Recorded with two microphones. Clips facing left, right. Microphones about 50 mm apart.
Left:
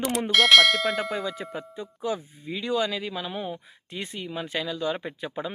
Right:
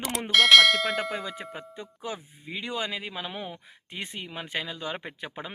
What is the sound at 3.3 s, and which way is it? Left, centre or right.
Speech, right.